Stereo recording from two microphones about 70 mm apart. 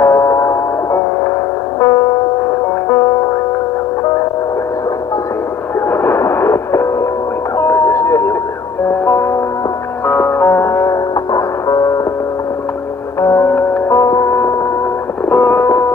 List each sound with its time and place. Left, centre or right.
0.0 s music: left
1.8 s music: left
5.9 s music: left
7.5 s a sound: left
9.0 s music: left
13.2 s music: left
15.2 s music: left